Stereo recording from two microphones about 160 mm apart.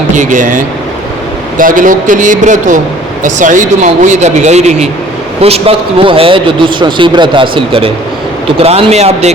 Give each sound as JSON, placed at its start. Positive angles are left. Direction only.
{"t": 0.2, "sound": "a man's voice", "side_deg": -55}